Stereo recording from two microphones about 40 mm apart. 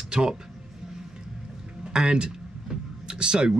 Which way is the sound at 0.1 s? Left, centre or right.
Centre.